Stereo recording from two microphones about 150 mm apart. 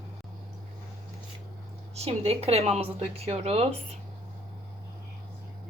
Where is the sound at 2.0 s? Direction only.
40° right (ahead or behind).